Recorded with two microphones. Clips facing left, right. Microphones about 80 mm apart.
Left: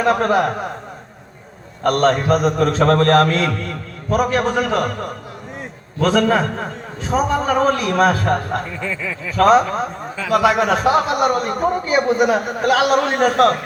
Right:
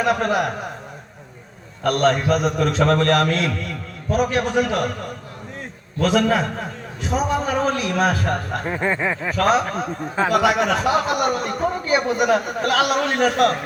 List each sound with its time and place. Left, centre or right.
0.0 s a man's voice: left
1.8 s a man's voice: left
6.0 s a man's voice: left
8.6 s a sound: right
9.4 s a man's voice: left